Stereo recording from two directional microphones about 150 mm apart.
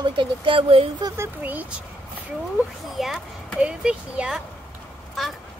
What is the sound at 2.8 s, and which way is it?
Speech, centre (ahead or behind).